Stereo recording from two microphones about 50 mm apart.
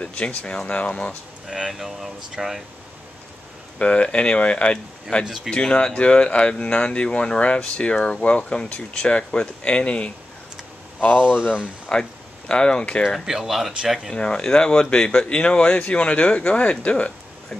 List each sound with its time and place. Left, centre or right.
0.0 s speech: left
1.5 s speech: centre
3.7 s speech: left
5.2 s speech: centre
5.5 s speech: centre
11.1 s speech: centre
11.9 s speech: centre
13.2 s speech: centre
14.1 s speech: centre